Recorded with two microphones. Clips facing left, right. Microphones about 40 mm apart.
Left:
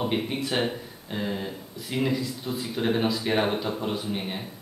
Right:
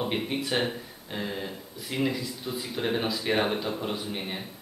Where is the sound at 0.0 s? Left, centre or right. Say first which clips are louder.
Left 2 dB; centre.